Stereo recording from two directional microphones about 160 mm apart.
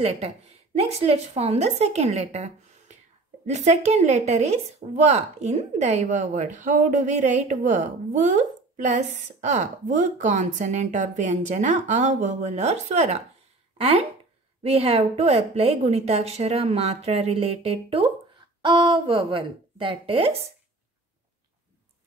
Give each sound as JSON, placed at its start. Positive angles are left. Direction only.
{"t": 0.0, "sound": "a woman's voice", "side_deg": -40}